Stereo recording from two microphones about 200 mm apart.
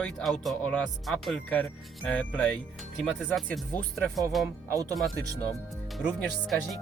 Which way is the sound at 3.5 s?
5° left (ahead or behind).